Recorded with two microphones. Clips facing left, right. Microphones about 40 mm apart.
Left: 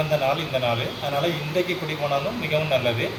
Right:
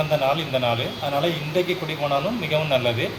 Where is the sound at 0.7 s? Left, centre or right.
Centre.